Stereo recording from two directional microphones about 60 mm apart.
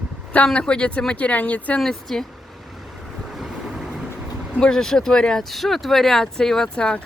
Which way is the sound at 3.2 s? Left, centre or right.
Centre.